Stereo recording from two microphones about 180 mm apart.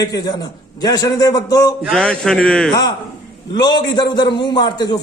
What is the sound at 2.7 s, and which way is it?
A man's voice, 20° left (ahead or behind).